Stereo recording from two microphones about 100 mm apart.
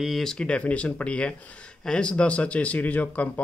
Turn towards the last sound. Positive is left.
turn(degrees=15)  # may be behind; listen again after turning